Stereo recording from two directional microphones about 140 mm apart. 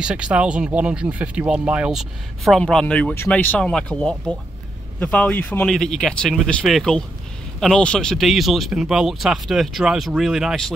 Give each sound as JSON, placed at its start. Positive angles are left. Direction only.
{"t": 0.0, "sound": "speech", "side_deg": -10}